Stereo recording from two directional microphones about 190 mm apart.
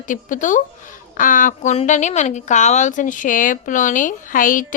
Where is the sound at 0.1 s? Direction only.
45° left (ahead or behind).